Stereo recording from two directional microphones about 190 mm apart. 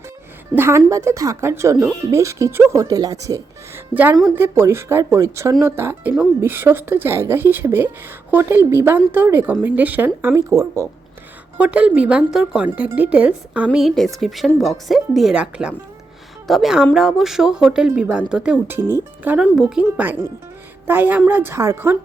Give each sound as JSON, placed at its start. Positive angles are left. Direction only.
{"t": 0.5, "sound": "speech", "side_deg": -10}